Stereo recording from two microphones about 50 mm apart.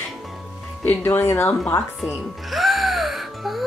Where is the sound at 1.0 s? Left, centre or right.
Left.